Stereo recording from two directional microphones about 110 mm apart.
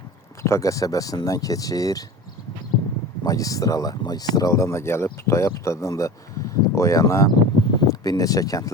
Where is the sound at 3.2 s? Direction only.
30° left (ahead or behind).